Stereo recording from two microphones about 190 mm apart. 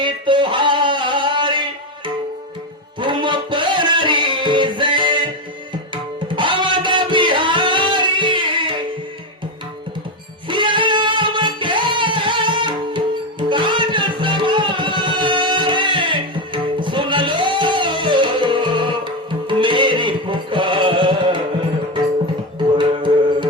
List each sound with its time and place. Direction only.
0.0 s a sound: 25° right (ahead or behind)
3.0 s music: 25° right (ahead or behind)
10.5 s music: 25° right (ahead or behind)
22.8 s music: 25° right (ahead or behind)